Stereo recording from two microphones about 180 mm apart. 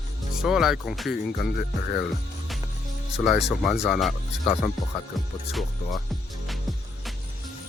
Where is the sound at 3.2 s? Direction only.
Centre (ahead or behind).